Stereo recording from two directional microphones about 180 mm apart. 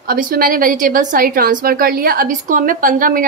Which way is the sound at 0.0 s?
55° right (ahead or behind).